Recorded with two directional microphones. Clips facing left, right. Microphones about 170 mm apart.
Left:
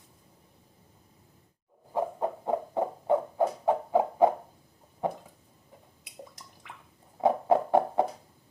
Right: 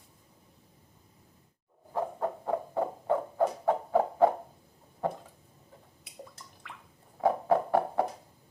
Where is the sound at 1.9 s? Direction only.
15° left (ahead or behind).